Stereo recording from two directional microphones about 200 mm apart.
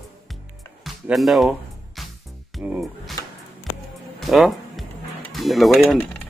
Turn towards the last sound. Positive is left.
turn(degrees=0)  # may be behind; listen again after turning